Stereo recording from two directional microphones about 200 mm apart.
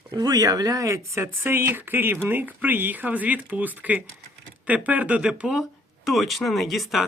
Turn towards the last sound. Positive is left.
turn(degrees=0)  # may be behind; listen again after turning